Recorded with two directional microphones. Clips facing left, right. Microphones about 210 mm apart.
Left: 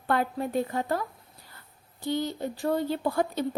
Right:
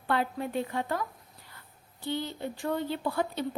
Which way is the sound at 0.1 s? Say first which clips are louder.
Left 3 dB; 45° left (ahead or behind).